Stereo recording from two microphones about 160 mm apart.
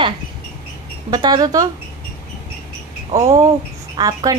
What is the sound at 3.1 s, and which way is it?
Speech, 20° right (ahead or behind).